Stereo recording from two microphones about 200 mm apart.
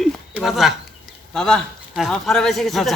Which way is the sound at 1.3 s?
Centre (ahead or behind).